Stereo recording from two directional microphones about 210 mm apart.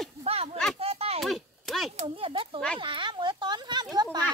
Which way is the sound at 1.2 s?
Centre (ahead or behind).